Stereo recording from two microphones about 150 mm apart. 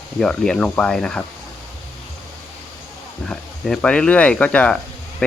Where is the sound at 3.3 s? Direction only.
5° left (ahead or behind).